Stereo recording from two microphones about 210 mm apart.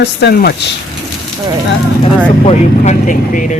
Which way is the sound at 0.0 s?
50° left (ahead or behind).